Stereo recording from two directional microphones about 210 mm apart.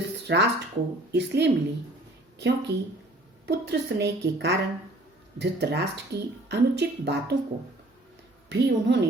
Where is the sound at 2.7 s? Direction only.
55° right (ahead or behind).